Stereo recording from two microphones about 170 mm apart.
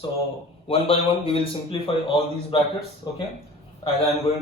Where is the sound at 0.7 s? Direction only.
35° left (ahead or behind).